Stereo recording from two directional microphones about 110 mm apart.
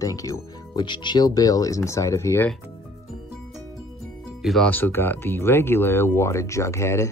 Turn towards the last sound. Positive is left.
turn(degrees=25)  # may be behind; listen again after turning